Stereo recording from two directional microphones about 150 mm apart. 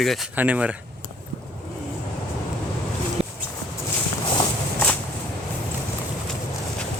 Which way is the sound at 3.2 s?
45° right (ahead or behind).